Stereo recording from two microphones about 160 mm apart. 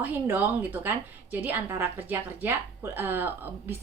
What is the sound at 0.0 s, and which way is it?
A woman's voice, 10° right (ahead or behind).